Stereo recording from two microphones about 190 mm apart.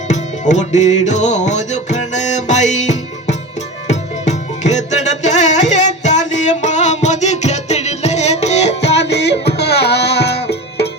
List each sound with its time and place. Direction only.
0.1 s music: 40° left (ahead or behind)
9.0 s music: 65° left (ahead or behind)